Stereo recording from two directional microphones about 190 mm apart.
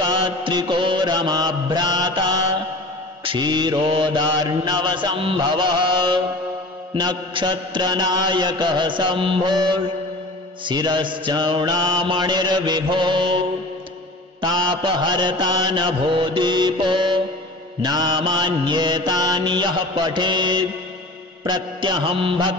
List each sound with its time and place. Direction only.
0.0 s mantra: 25° right (ahead or behind)
14.4 s mantra: 25° right (ahead or behind)